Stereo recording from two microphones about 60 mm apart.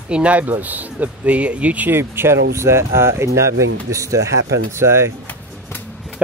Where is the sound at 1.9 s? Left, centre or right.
Right.